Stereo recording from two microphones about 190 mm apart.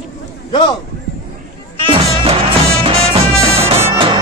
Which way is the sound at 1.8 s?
30° right (ahead or behind).